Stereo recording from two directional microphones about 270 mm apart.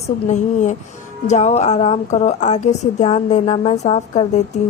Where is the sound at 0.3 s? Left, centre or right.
Left.